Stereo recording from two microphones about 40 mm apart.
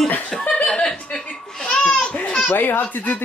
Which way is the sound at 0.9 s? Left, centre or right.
Centre.